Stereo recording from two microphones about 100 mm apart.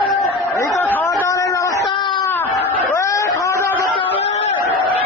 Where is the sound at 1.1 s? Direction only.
35° left (ahead or behind).